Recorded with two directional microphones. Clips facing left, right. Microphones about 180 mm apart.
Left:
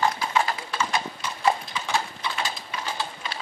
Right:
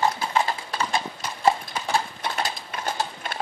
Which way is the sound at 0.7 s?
35° right (ahead or behind).